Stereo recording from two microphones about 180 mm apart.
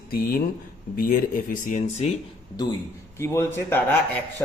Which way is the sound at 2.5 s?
20° left (ahead or behind).